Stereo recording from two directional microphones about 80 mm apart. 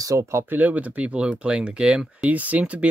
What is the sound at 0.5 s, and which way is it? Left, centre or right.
Speech, centre.